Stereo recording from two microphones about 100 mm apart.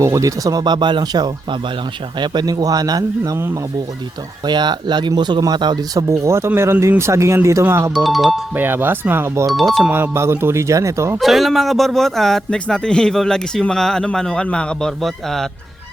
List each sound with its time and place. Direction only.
0.0 s speech: 30° right (ahead or behind)
3.3 s speech: 25° right (ahead or behind)
4.4 s speech: 45° right (ahead or behind); by 7.9 s 25° right (ahead or behind)
7.9 s speech: centre (ahead or behind)
8.5 s speech: 20° right (ahead or behind)
9.5 s speech: centre (ahead or behind)
9.9 s speech: 25° right (ahead or behind)
11.2 s speech: centre (ahead or behind)